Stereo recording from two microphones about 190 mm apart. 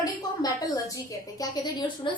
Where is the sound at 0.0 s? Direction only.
20° left (ahead or behind).